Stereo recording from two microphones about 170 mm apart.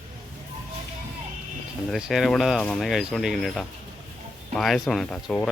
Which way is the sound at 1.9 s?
Centre (ahead or behind).